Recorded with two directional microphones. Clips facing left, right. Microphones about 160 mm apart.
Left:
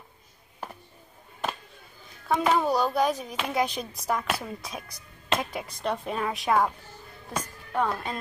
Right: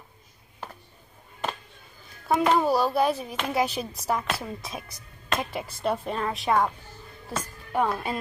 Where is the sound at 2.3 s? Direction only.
Centre (ahead or behind).